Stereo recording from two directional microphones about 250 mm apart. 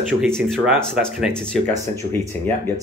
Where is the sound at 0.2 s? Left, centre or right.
Centre.